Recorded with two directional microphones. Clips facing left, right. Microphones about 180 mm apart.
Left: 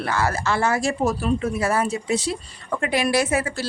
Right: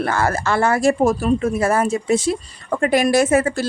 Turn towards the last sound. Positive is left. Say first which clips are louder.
# right 6 dB
turn(degrees=-50)  # may be behind; listen again after turning